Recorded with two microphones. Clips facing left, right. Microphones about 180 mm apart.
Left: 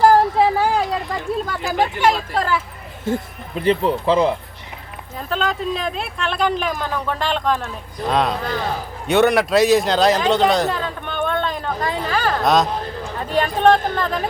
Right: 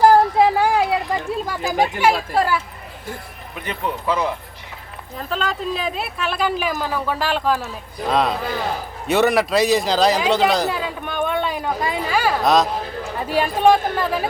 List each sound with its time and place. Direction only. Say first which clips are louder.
0.3 s a sound: right 1 dB; 10° right (ahead or behind)
1.7 s speech: even; 10° right (ahead or behind)
3.1 s speech: left 11 dB; 30° left (ahead or behind)
5.1 s speech: left 2 dB; centre (ahead or behind)
9.0 s a sound: left 2 dB; centre (ahead or behind)
13.1 s speech: even; 10° right (ahead or behind)